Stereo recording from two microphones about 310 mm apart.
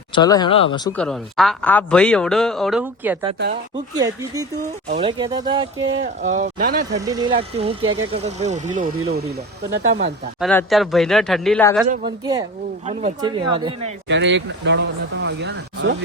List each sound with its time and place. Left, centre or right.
0.1 s speech: centre
0.9 s speech: centre; by 7.0 s right
7.1 s speech: centre
10.4 s speech: centre
11.9 s speech: centre
14.1 s speech: right